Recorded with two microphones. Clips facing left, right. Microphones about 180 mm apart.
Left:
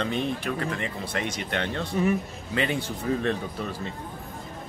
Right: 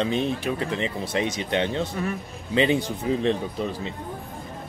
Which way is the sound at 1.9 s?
20° left (ahead or behind).